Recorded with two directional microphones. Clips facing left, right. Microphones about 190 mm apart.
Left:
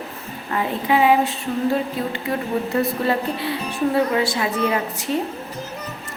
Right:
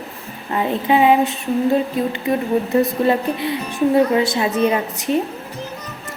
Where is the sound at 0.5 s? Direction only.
25° right (ahead or behind).